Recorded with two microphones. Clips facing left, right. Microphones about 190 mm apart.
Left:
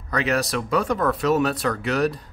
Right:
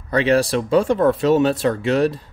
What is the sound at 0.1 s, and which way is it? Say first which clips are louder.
Speech: right 7 dB; 30° right (ahead or behind).